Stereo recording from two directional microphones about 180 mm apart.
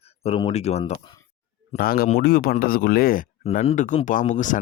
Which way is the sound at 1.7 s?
55° left (ahead or behind).